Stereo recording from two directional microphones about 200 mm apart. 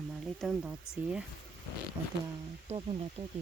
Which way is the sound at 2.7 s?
30° right (ahead or behind).